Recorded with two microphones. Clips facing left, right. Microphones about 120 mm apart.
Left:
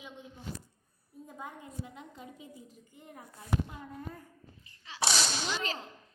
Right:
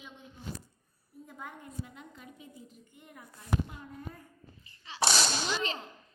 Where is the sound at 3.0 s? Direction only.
35° left (ahead or behind).